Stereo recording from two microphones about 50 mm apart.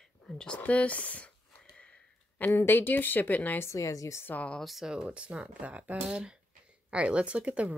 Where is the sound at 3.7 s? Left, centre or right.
Left.